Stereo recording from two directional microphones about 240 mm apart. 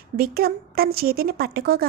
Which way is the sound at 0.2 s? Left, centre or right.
Right.